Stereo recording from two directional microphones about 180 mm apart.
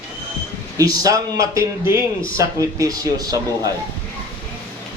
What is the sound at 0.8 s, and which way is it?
A man's voice, 20° right (ahead or behind).